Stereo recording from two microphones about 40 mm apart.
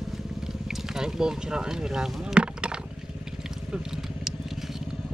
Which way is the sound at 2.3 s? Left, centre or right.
Right.